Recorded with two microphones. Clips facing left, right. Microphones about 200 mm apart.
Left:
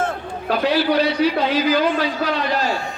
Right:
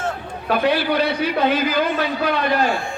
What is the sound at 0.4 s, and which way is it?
A man's voice, 55° right (ahead or behind).